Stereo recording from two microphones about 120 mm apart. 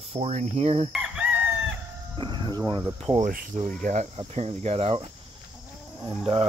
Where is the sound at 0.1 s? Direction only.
60° right (ahead or behind).